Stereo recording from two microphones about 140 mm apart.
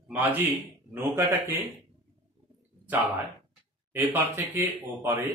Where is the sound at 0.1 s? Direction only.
15° right (ahead or behind).